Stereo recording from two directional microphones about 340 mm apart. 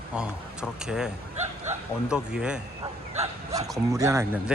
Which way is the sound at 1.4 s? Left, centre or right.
Centre.